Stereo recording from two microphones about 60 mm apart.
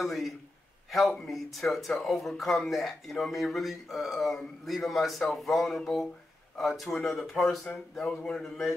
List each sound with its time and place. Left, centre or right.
0.0 s speech: centre